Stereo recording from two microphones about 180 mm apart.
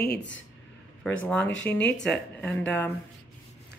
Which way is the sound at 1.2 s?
5° left (ahead or behind).